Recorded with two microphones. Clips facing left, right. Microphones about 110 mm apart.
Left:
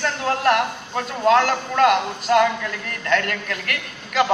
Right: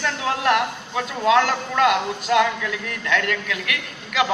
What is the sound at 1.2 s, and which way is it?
Speech, 45° left (ahead or behind).